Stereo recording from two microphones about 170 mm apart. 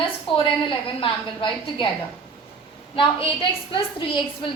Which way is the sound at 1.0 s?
30° left (ahead or behind).